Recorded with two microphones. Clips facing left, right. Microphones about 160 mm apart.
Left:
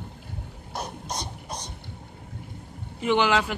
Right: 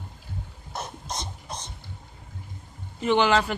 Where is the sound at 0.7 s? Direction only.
15° left (ahead or behind).